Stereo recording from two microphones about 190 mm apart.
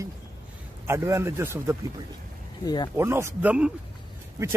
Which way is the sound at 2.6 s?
20° left (ahead or behind).